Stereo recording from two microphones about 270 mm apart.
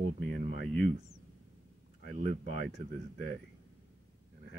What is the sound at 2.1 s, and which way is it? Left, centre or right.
Speech, right.